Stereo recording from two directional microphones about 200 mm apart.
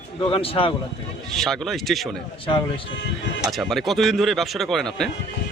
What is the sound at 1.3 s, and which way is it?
Speech, centre (ahead or behind).